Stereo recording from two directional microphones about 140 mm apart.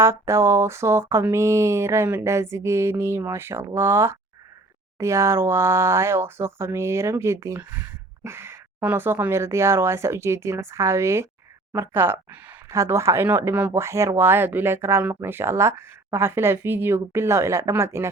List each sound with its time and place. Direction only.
0.0 s speech: 20° right (ahead or behind)